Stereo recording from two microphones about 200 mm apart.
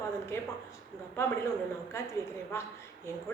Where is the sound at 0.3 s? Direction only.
15° left (ahead or behind).